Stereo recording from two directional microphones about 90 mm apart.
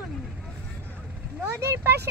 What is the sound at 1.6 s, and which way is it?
Speech, 30° right (ahead or behind).